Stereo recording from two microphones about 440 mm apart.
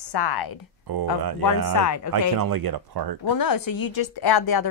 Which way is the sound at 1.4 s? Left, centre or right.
Left.